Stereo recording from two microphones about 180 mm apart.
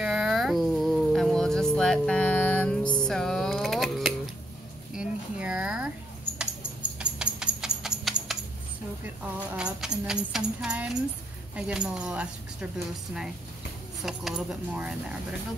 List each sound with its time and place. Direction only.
0.0 s a sound: 5° right (ahead or behind)
2.8 s music: 25° left (ahead or behind)
3.1 s a sound: centre (ahead or behind)
6.3 s music: 5° right (ahead or behind)
9.6 s music: 5° right (ahead or behind)
11.5 s speech: 5° right (ahead or behind)
14.0 s speech: centre (ahead or behind)